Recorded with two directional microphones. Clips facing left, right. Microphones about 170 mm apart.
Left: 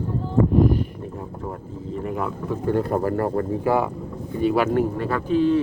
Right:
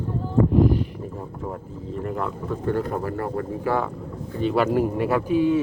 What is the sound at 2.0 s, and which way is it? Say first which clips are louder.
Speech: left 1 dB; 5° left (ahead or behind).